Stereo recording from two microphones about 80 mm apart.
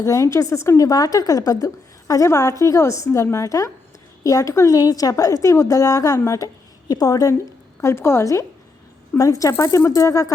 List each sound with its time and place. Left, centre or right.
0.0 s a woman's voice: left
7.8 s a woman's voice: left